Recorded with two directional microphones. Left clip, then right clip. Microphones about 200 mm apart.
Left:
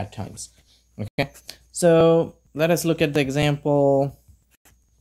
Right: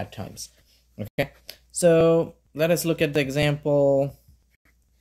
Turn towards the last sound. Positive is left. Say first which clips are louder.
# left 1 dB
turn(degrees=15)  # may be behind; listen again after turning